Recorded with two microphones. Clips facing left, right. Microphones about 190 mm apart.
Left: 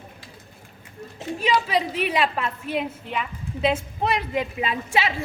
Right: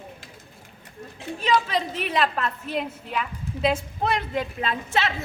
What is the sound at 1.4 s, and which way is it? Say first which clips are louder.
A woman's voice: left 1 dB; 5° left (ahead or behind).